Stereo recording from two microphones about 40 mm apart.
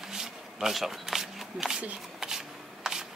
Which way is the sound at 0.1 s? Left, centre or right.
Centre.